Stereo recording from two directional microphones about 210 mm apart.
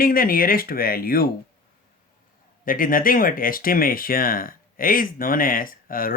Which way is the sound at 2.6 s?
40° left (ahead or behind).